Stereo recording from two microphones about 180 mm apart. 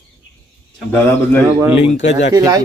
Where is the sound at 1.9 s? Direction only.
40° left (ahead or behind).